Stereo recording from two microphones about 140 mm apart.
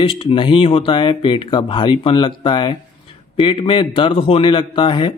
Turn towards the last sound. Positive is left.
turn(degrees=35)  # may be behind; listen again after turning